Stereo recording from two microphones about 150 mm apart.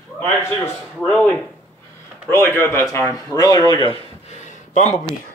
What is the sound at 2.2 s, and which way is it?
A man's voice, 15° left (ahead or behind).